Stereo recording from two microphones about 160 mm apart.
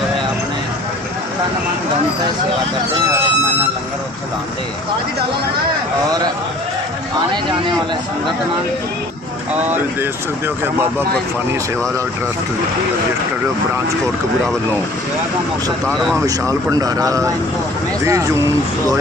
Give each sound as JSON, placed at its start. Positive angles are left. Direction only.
{"t": 9.6, "sound": "speech", "side_deg": -10}
{"t": 15.9, "sound": "speech", "side_deg": 0}
{"t": 16.2, "sound": "a man's voice", "side_deg": -20}